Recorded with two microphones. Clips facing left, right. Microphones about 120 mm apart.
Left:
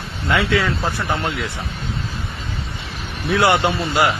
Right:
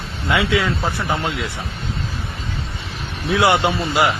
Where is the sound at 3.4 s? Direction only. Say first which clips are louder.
Even; 20° right (ahead or behind).